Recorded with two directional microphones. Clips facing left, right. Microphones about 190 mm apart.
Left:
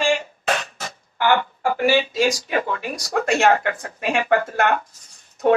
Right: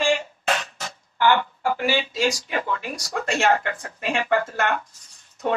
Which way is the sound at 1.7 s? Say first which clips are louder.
Left 6 dB; 45° left (ahead or behind).